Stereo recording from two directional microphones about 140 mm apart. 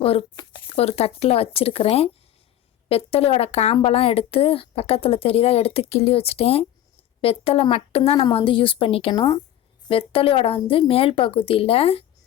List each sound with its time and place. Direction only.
0.0 s a woman's voice: 40° left (ahead or behind)